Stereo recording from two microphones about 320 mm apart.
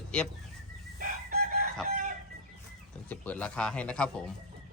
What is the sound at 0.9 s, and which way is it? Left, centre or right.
Chicken, right.